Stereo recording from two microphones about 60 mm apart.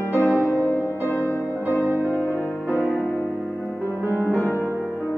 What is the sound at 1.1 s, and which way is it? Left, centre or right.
Music, left.